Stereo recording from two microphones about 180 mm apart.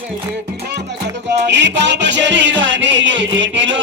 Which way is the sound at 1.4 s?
80° right.